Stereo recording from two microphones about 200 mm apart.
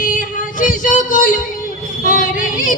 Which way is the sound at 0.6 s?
40° left (ahead or behind).